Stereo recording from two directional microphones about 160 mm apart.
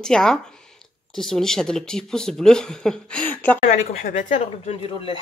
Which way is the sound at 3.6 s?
50° left (ahead or behind).